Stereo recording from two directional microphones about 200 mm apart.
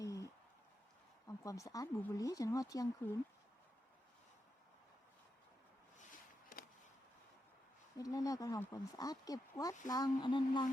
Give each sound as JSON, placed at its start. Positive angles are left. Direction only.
{"t": 0.0, "sound": "a sound", "side_deg": 15}
{"t": 1.5, "sound": "speech", "side_deg": 15}
{"t": 7.9, "sound": "speech", "side_deg": 15}